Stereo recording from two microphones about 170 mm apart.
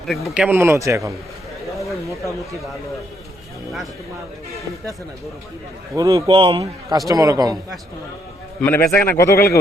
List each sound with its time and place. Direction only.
0.3 s a man's voice: 10° right (ahead or behind)
1.7 s a sound: centre (ahead or behind)
2.0 s a man's voice: 20° right (ahead or behind)
5.9 s a man's voice: 20° right (ahead or behind)
6.2 s a man's voice: 30° right (ahead or behind)
7.1 s a man's voice: 20° right (ahead or behind)
8.6 s a man's voice: 15° left (ahead or behind)